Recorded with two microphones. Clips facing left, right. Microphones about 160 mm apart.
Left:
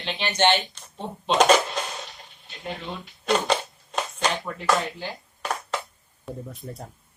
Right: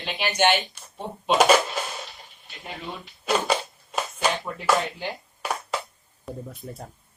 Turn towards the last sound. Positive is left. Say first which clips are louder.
# even
turn(degrees=0)  # may be behind; listen again after turning